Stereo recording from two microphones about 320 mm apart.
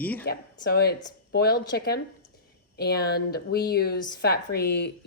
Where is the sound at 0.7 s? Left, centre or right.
Left.